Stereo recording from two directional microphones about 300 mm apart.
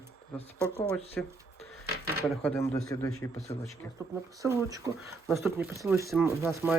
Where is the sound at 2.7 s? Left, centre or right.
Centre.